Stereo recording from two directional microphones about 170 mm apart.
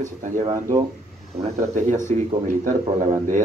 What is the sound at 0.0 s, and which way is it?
A man's voice, 45° right (ahead or behind).